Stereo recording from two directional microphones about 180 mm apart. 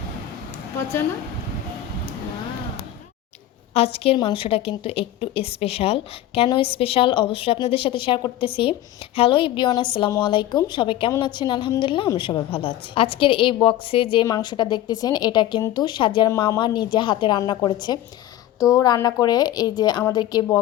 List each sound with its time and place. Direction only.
3.8 s a woman's voice: 35° left (ahead or behind)